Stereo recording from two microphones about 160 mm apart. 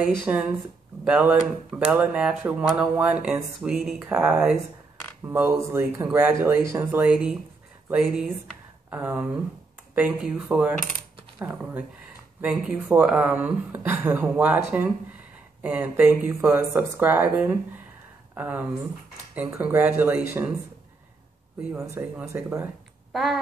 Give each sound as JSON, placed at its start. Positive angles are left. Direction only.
{"t": 0.3, "sound": "speech", "side_deg": -10}
{"t": 21.7, "sound": "speech", "side_deg": -15}
{"t": 23.1, "sound": "speech", "side_deg": 0}